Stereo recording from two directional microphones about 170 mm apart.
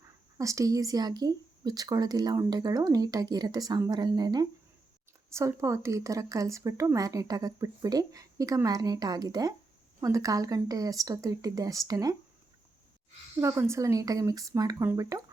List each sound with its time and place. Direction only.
0.3 s speech: 20° right (ahead or behind)
13.4 s speech: 15° right (ahead or behind)